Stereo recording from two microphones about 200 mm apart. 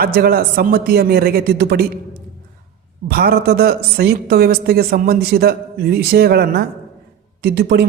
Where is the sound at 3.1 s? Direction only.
50° right (ahead or behind).